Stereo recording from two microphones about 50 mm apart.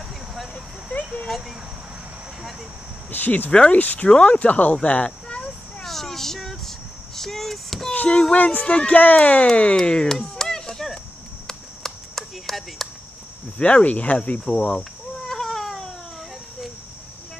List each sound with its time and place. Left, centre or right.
0.3 s vehicle: centre
3.1 s speech: left
4.8 s a sound: left
5.9 s a sound: centre
7.2 s speech: centre
8.1 s speech: centre
10.1 s a sound: centre
13.6 s speech: left
15.2 s cat: centre